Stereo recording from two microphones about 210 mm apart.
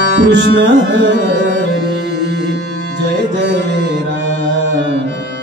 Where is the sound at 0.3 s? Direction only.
55° right (ahead or behind).